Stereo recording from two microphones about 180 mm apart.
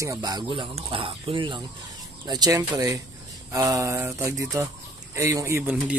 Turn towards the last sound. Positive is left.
turn(degrees=-10)  # may be behind; listen again after turning